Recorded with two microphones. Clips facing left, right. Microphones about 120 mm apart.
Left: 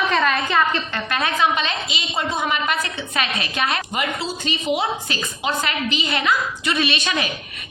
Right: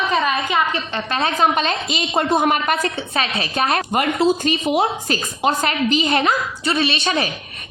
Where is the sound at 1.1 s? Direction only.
30° right (ahead or behind).